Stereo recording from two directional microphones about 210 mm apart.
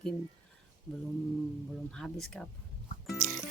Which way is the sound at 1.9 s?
5° left (ahead or behind).